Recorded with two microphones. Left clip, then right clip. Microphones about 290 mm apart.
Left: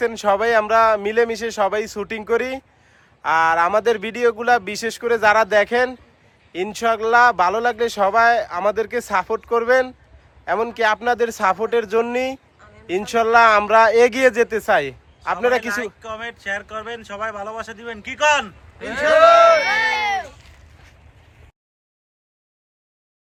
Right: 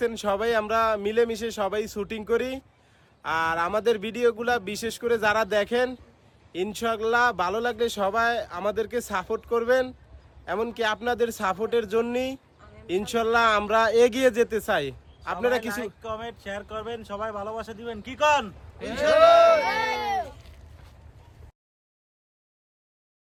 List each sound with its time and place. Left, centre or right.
0.0 s speech: centre
15.7 s speech: centre
19.6 s speech: centre